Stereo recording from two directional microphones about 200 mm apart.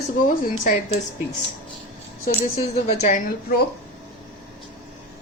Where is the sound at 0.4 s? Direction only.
40° left (ahead or behind).